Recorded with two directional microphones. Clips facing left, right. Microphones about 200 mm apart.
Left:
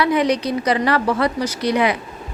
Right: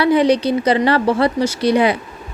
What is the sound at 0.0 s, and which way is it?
Speech, 30° right (ahead or behind).